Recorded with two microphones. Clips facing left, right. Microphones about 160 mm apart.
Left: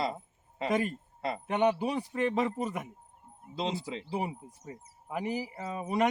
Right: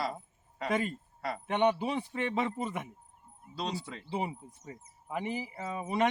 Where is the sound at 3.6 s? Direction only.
20° left (ahead or behind).